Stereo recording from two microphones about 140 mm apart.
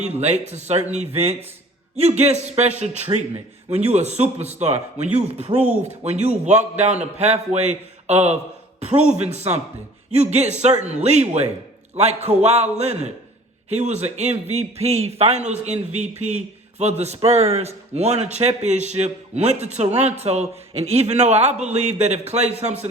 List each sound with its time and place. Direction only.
0.0 s a man's voice: 50° right (ahead or behind)